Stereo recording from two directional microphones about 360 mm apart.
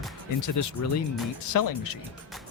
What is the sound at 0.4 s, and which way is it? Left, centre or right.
Speech, left.